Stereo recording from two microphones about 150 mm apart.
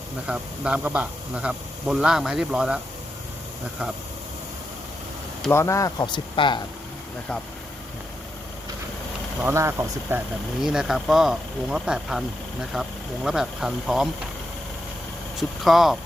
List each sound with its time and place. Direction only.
0.3 s speech: 5° right (ahead or behind)
5.5 s speech: 20° left (ahead or behind)
9.4 s speech: 15° right (ahead or behind)
10.6 s speech: 5° right (ahead or behind)
15.4 s speech: centre (ahead or behind)